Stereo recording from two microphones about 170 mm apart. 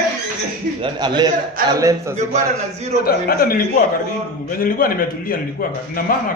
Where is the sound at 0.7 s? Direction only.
30° right (ahead or behind).